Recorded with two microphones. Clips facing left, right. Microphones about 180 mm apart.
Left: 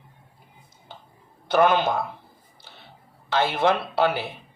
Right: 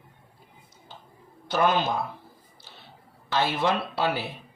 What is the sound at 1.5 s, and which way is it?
Speech, 55° left (ahead or behind).